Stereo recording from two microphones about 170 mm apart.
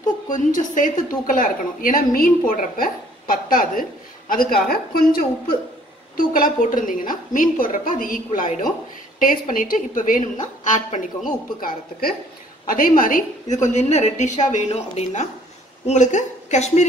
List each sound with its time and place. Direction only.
0.3 s a woman's voice: 50° left (ahead or behind)